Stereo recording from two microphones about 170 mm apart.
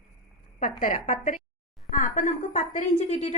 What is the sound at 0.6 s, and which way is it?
A woman's voice, 50° left (ahead or behind).